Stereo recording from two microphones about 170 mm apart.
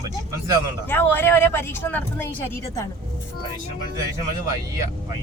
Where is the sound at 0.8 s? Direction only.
10° left (ahead or behind).